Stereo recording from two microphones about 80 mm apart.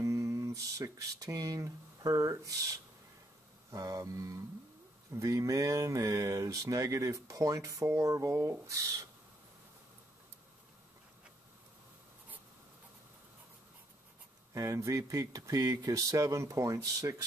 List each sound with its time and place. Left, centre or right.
0.0 s speech: right
14.5 s speech: right